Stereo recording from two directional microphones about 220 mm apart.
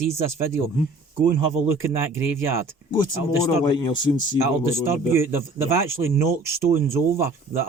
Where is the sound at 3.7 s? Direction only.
20° left (ahead or behind).